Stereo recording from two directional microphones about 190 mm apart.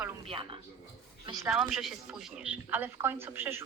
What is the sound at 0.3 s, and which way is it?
A woman's voice, 25° right (ahead or behind).